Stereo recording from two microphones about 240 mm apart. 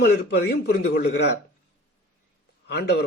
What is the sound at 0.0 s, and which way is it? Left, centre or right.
Speech, left.